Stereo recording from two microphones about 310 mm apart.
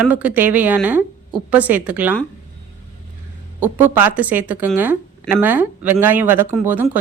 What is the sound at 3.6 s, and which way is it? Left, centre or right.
Speech, centre.